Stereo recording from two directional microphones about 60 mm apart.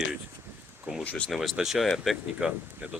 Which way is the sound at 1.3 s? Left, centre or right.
Centre.